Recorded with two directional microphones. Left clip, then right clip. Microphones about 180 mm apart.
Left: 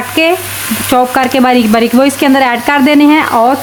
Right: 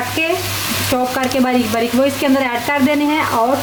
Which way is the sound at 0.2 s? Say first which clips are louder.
Left 9 dB; 55° left (ahead or behind).